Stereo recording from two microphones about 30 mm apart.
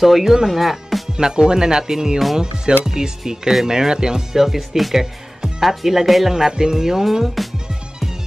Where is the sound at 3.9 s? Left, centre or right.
Right.